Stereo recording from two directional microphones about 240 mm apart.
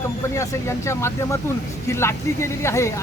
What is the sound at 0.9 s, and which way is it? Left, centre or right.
Speech, centre.